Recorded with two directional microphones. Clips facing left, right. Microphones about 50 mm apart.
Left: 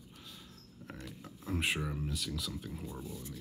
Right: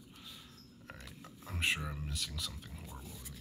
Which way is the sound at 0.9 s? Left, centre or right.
Centre.